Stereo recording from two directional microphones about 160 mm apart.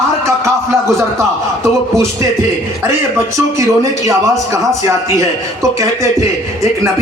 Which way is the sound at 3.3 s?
20° right (ahead or behind).